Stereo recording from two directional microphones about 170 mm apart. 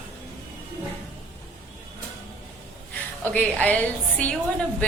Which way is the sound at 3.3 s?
10° left (ahead or behind).